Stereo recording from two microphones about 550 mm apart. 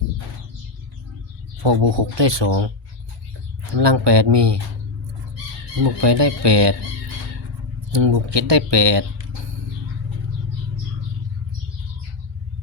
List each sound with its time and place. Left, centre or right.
1.6 s speech: right
3.8 s speech: right
5.8 s speech: right
7.9 s speech: right